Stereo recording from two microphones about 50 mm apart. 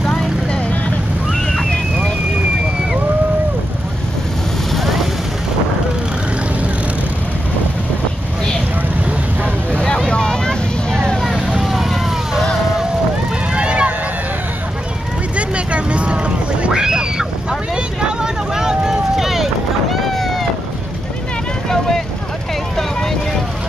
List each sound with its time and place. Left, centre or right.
0.0 s vehicle: centre
4.7 s vehicle: centre
9.9 s vehicle: centre
11.6 s vehicle: centre
13.5 s a sound: right
15.3 s vehicle: right
16.6 s a sound: centre
21.6 s vehicle: centre